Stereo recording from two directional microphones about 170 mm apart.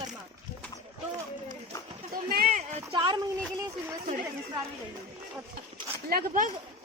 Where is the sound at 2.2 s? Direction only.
60° right (ahead or behind).